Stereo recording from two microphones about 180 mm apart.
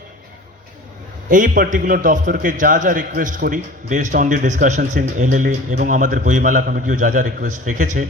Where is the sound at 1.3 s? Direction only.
45° right (ahead or behind).